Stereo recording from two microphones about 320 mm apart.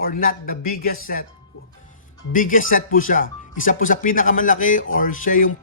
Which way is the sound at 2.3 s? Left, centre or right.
Left.